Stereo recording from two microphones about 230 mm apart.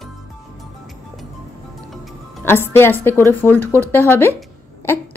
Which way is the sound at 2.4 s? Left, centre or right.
Centre.